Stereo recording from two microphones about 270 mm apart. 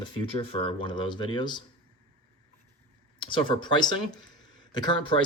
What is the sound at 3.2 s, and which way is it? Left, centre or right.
Speech, centre.